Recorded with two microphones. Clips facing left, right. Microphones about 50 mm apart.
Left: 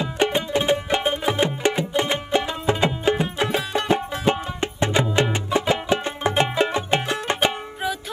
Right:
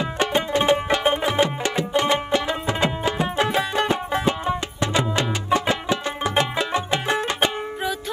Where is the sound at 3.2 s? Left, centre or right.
Right.